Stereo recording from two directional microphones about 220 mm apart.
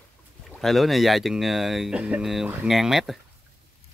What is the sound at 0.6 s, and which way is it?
Speech, centre (ahead or behind).